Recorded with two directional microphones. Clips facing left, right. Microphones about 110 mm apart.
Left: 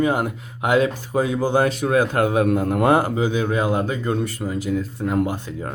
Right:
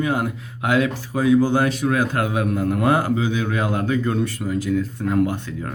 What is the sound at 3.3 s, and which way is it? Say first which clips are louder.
Speech: left 2 dB; 20° left (ahead or behind).